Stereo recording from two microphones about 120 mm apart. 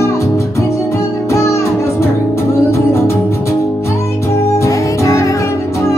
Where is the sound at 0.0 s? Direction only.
25° left (ahead or behind).